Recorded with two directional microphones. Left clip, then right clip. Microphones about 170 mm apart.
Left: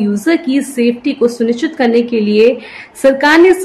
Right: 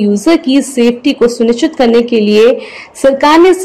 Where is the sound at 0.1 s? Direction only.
20° right (ahead or behind).